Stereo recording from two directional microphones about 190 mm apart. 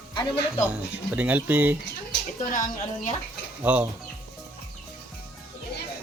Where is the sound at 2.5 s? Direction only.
45° left (ahead or behind).